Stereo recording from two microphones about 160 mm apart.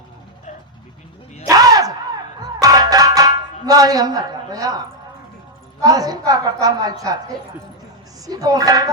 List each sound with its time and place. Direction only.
1.5 s a sound: 25° right (ahead or behind)
2.4 s music: 25° right (ahead or behind)
5.8 s a woman's voice: 25° right (ahead or behind)
8.3 s a woman's voice: 25° right (ahead or behind)